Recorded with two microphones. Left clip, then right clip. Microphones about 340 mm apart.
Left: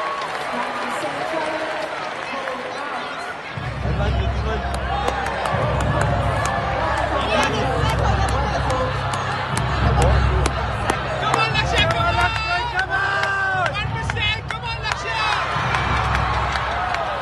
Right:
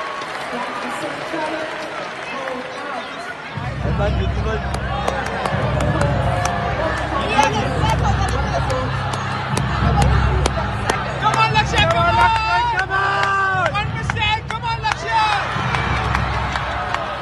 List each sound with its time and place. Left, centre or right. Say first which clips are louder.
5.8 s run: right 1 dB; centre
7.2 s a sound: right 6 dB; centre
11.2 s run: right 4 dB; centre
14.9 s hubbub: right 4 dB; centre